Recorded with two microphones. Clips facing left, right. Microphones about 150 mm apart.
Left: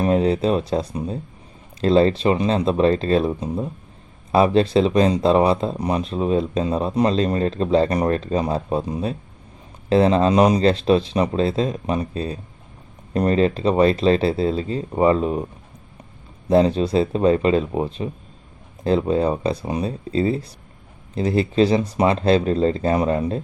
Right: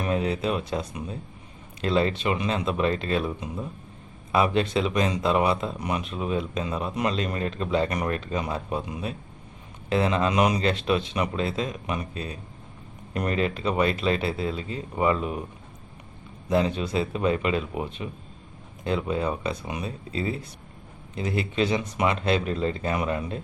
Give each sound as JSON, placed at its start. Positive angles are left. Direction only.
{"t": 0.0, "sound": "speech", "side_deg": 35}
{"t": 16.5, "sound": "speech", "side_deg": 35}